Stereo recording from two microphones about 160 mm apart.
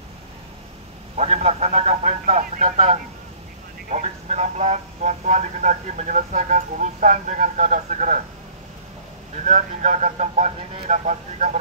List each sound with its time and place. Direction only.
1.1 s speech: 45° right (ahead or behind)
9.4 s speech: 50° right (ahead or behind)